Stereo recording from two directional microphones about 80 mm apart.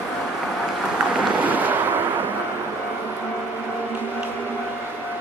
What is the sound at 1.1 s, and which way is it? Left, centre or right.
Boat, centre.